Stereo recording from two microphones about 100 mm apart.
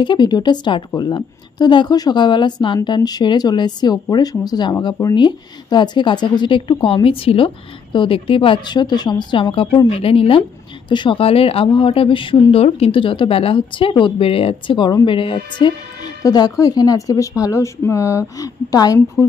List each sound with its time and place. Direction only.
0.0 s a woman's voice: 50° left (ahead or behind); by 10.4 s 65° left (ahead or behind)
10.9 s a woman's voice: 50° left (ahead or behind)
11.1 s speech: 75° left (ahead or behind)
15.0 s speech: 60° left (ahead or behind)
16.2 s speech: 40° left (ahead or behind)